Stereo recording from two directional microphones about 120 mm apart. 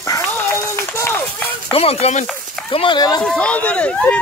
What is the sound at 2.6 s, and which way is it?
Speech, 45° left (ahead or behind).